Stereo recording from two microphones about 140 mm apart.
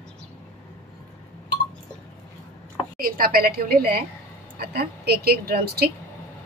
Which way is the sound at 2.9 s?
90° right.